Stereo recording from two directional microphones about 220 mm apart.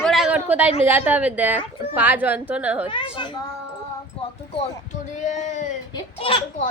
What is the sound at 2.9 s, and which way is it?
Speech, 20° left (ahead or behind).